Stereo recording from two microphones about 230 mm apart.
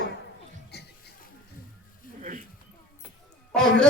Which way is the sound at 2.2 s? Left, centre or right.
Right.